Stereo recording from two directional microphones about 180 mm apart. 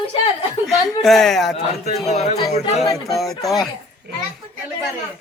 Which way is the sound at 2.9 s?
Centre (ahead or behind).